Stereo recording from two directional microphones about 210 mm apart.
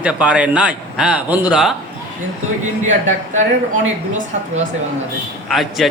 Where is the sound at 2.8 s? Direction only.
35° right (ahead or behind).